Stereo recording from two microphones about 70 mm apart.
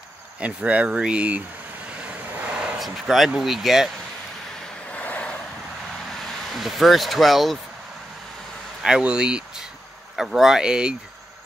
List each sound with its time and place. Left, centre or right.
0.4 s speech: centre
2.0 s vehicle: centre
2.5 s a sound: centre
2.8 s speech: centre
4.9 s vehicle: centre
6.2 s speech: centre
8.8 s speech: centre